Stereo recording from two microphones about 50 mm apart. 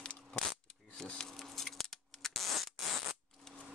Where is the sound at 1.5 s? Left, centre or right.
Centre.